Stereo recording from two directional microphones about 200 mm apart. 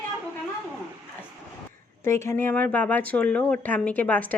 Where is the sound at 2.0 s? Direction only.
15° left (ahead or behind).